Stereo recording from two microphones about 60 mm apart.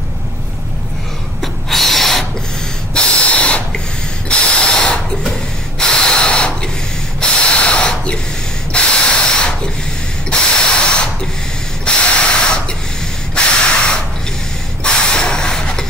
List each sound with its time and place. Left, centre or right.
1.4 s snort: centre
2.9 s snort: centre
4.3 s spray: centre
5.8 s a sound: centre
7.2 s spray: centre
14.8 s a sound: centre